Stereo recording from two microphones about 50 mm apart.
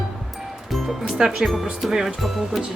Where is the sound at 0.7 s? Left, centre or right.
Centre.